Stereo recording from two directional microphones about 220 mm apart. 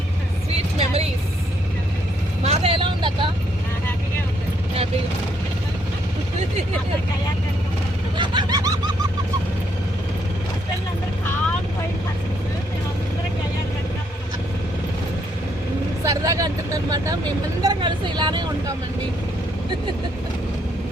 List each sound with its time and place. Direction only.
0.5 s vehicle: 30° right (ahead or behind)
2.4 s vehicle: 30° right (ahead or behind)
8.2 s a sound: 20° right (ahead or behind)
16.0 s vehicle: 15° right (ahead or behind)